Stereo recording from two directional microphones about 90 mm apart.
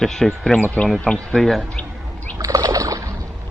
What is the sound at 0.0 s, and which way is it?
Speech, 5° left (ahead or behind).